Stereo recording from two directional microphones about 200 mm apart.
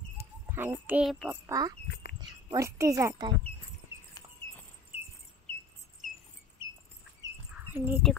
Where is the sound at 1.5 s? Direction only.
20° right (ahead or behind).